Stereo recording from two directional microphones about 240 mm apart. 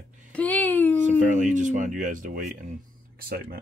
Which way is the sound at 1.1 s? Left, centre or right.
Right.